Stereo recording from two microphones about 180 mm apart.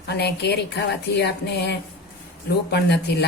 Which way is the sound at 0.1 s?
65° left (ahead or behind).